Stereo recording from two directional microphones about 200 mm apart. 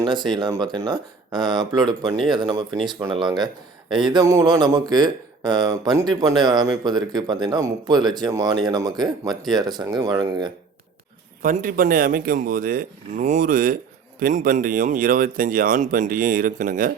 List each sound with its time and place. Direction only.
0.0 s a man's voice: 25° right (ahead or behind)
11.4 s speech: 40° right (ahead or behind)